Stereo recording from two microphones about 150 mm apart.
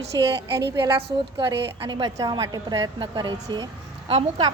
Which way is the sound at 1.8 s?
30° right (ahead or behind).